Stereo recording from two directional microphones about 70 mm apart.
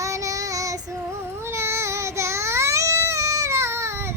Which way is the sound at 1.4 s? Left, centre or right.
Right.